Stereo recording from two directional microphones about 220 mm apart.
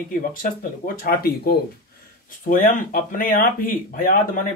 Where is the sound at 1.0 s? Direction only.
45° left (ahead or behind).